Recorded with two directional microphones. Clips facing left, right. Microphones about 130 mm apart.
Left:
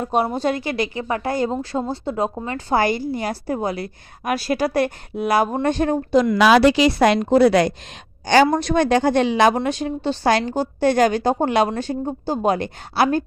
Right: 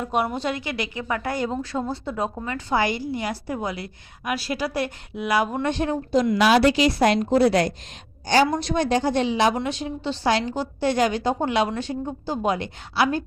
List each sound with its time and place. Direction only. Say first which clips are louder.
0.0 s a woman's voice: left 4 dB; 30° left (ahead or behind)
6.1 s a woman's voice: left 4 dB; 75° left (ahead or behind)
8.4 s a woman's voice: left 5 dB; 55° left (ahead or behind)